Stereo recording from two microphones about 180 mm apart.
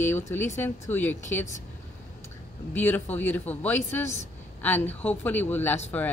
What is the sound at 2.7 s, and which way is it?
Speech, 10° left (ahead or behind).